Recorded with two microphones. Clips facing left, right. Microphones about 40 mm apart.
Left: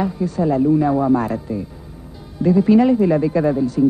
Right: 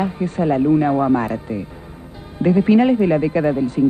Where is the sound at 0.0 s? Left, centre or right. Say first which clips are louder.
Even; right.